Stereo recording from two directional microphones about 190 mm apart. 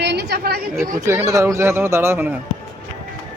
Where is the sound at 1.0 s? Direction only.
15° right (ahead or behind).